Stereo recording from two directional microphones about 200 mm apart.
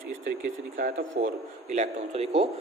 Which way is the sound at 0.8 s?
45° right (ahead or behind).